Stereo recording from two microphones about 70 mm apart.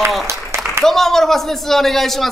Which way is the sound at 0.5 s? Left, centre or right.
Right.